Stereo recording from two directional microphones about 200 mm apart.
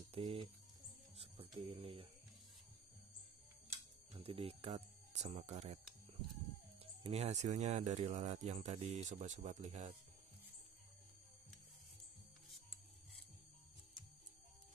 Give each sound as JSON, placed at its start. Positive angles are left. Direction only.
{"t": 0.1, "sound": "speech", "side_deg": -30}
{"t": 1.1, "sound": "a sound", "side_deg": -30}
{"t": 4.1, "sound": "speech", "side_deg": -30}
{"t": 6.8, "sound": "speech", "side_deg": -30}